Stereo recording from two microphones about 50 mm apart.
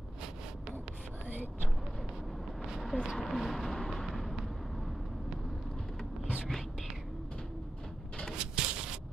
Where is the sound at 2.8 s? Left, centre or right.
Centre.